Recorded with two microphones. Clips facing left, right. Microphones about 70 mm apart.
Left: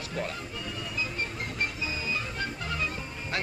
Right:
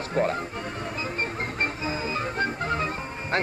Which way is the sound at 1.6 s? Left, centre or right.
Right.